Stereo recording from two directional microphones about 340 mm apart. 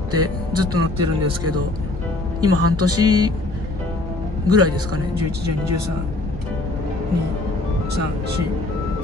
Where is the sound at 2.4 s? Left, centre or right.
Right.